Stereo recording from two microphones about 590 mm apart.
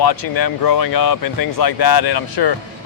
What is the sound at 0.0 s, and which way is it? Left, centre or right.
Speech, left.